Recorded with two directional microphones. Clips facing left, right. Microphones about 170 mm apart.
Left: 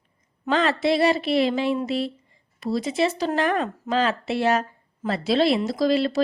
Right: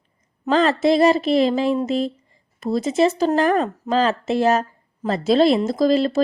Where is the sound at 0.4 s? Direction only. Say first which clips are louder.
Right 4 dB; 40° right (ahead or behind).